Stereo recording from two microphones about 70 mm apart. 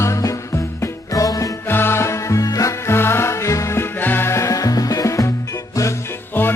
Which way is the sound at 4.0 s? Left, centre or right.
Left.